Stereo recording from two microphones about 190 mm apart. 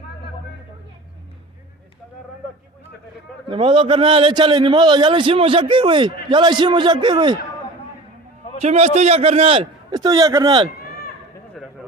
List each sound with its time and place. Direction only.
3.5 s a man's voice: 25° right (ahead or behind)
8.6 s a man's voice: 35° right (ahead or behind)
11.6 s a sound: centre (ahead or behind)